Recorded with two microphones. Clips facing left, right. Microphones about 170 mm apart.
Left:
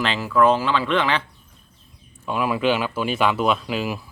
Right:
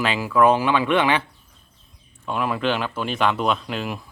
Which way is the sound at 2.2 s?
5° left (ahead or behind).